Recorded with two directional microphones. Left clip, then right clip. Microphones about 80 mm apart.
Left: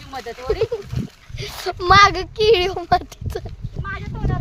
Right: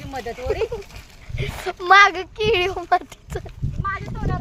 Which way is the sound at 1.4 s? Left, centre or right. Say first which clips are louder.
Left 2 dB; left.